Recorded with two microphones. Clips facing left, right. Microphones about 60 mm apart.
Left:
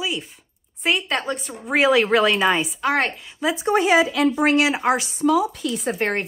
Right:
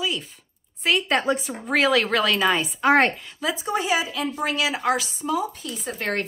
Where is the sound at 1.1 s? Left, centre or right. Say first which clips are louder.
Right 3 dB; centre.